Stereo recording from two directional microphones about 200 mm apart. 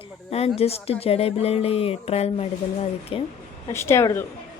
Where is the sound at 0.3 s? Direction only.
30° left (ahead or behind).